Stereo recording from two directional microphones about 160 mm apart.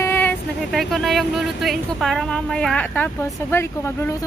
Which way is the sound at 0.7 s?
Centre (ahead or behind).